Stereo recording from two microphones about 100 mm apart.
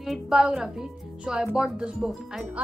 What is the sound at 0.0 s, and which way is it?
Speech, 5° right (ahead or behind).